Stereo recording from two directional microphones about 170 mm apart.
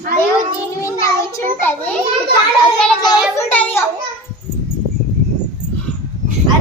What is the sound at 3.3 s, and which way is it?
Speech, 10° left (ahead or behind).